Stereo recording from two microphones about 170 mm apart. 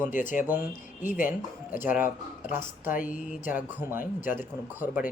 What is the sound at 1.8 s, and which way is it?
Speech, 10° right (ahead or behind).